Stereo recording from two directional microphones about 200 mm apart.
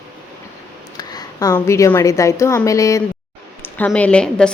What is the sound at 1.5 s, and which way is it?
A woman's voice, 10° left (ahead or behind).